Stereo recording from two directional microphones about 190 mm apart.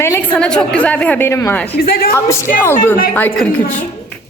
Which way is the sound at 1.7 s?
50° left (ahead or behind).